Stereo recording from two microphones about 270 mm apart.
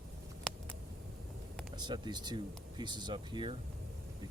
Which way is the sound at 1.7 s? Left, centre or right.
Centre.